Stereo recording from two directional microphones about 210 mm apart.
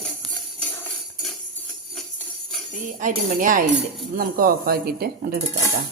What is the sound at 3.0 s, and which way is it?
Speech, 40° right (ahead or behind).